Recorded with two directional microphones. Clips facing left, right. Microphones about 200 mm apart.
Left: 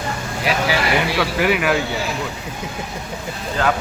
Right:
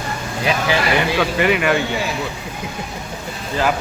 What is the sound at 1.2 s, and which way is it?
Speech, centre (ahead or behind).